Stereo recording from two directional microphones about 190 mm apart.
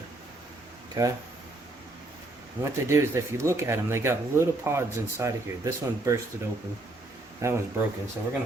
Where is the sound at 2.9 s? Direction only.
15° right (ahead or behind).